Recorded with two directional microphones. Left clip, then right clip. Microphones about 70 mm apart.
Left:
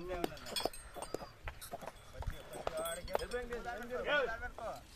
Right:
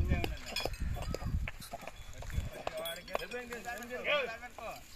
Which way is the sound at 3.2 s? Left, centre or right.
Left.